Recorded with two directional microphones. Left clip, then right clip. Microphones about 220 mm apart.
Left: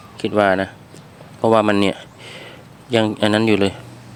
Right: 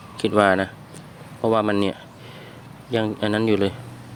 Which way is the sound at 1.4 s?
15° left (ahead or behind).